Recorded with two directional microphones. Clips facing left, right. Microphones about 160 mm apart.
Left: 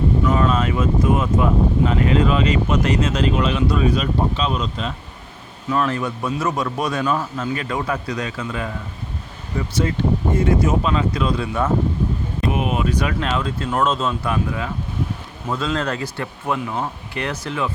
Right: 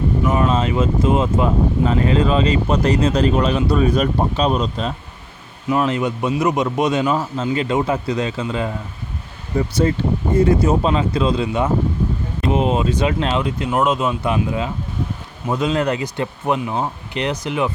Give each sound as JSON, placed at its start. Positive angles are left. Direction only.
{"t": 0.3, "sound": "speech", "side_deg": -25}
{"t": 5.7, "sound": "speech", "side_deg": -15}